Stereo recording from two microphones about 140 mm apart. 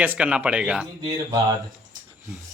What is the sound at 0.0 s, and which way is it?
Speech, 10° right (ahead or behind).